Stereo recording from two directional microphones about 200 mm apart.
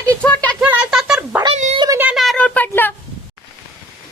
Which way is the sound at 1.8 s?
15° right (ahead or behind).